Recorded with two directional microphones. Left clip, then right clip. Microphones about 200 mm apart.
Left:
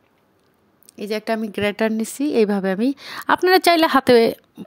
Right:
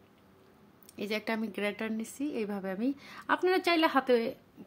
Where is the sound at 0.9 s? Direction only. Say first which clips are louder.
Left 10 dB; 30° left (ahead or behind); by 4.6 s 50° left (ahead or behind).